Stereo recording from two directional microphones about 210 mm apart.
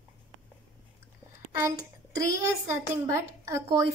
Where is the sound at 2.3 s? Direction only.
15° right (ahead or behind).